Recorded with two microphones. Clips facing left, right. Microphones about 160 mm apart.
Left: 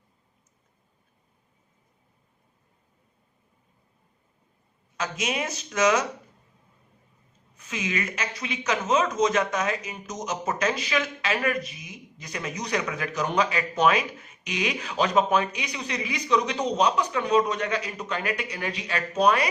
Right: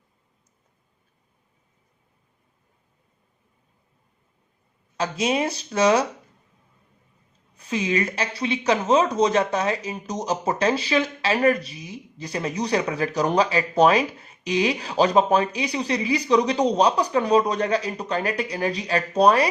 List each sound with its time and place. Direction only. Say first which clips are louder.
4.9 s speech: right 6 dB; 30° right (ahead or behind)
7.5 s speech: right 7 dB; 35° right (ahead or behind)